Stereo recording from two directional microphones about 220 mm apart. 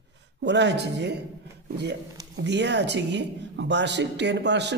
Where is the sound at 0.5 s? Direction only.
50° right (ahead or behind).